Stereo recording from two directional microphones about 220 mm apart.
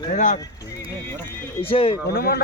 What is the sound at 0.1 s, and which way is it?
Speech, 35° left (ahead or behind).